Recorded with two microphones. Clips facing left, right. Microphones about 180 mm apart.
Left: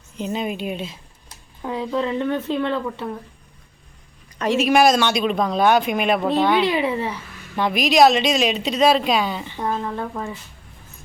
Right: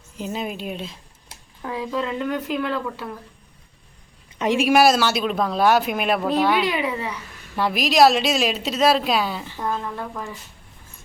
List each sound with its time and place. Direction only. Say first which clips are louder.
0.2 s speech: left 3 dB; centre (ahead or behind)
1.6 s speech: left 3 dB; 25° left (ahead or behind)
4.4 s speech: even; 15° right (ahead or behind)
6.7 s speech: left 3 dB; 30° left (ahead or behind)
7.5 s speech: left 2 dB; centre (ahead or behind)
9.6 s speech: left 3 dB; 20° left (ahead or behind)